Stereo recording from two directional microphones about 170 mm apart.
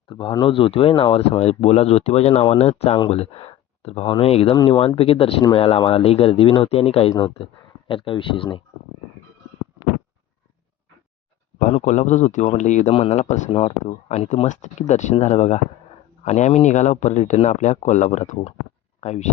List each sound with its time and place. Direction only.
0.1 s speech: 30° left (ahead or behind)
7.1 s speech: 25° left (ahead or behind)
11.6 s speech: 45° left (ahead or behind)